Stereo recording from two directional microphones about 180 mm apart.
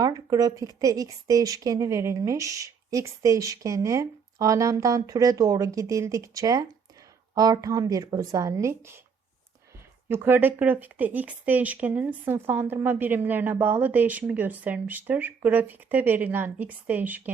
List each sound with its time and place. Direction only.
0.0 s speech: 20° right (ahead or behind)
10.1 s a woman's voice: 10° right (ahead or behind)